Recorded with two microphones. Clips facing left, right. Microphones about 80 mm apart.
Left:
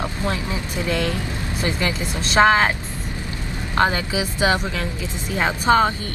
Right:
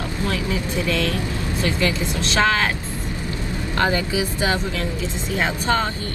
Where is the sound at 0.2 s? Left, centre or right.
Left.